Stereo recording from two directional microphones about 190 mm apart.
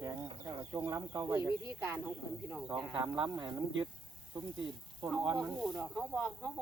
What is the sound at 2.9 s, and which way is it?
Speech, 20° right (ahead or behind).